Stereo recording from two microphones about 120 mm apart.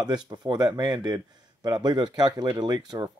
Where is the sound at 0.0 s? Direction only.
35° right (ahead or behind).